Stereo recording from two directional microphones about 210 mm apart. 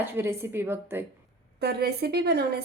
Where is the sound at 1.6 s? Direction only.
50° right (ahead or behind).